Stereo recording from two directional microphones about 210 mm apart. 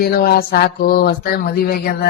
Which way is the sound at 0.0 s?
45° left (ahead or behind).